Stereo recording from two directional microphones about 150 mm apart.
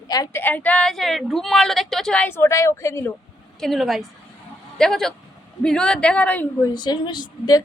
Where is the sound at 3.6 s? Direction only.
Centre (ahead or behind).